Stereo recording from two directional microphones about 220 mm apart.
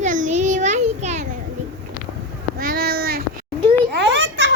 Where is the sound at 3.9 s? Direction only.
55° right (ahead or behind).